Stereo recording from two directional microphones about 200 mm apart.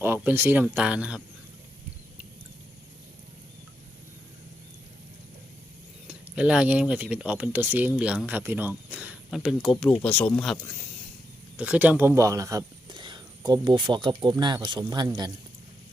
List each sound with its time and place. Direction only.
0.0 s speech: 10° right (ahead or behind)
6.1 s speech: 5° right (ahead or behind)